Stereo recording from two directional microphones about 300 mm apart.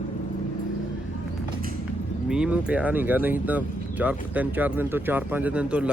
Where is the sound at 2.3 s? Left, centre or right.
Centre.